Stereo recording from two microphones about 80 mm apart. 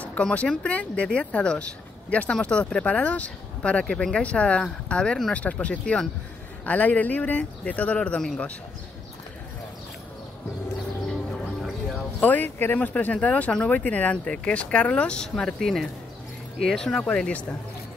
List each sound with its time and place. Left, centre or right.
0.0 s speech: centre
12.2 s speech: left